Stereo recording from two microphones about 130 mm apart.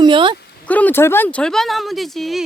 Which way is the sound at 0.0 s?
40° right (ahead or behind).